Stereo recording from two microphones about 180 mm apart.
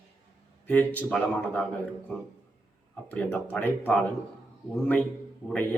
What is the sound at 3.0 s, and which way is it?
Speech, 10° left (ahead or behind).